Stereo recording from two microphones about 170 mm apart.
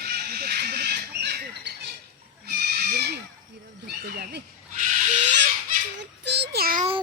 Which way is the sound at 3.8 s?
65° right (ahead or behind).